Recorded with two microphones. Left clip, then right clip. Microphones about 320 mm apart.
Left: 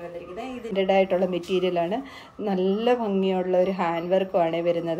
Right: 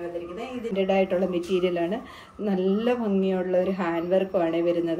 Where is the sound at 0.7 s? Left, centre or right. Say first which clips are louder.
Left 2 dB; left.